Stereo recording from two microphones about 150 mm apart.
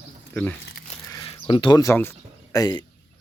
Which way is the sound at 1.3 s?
35° left (ahead or behind).